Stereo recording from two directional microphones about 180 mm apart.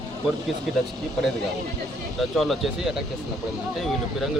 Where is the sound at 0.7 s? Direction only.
Centre (ahead or behind).